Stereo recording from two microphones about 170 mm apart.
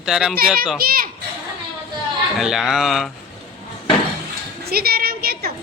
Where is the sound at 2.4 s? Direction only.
5° right (ahead or behind).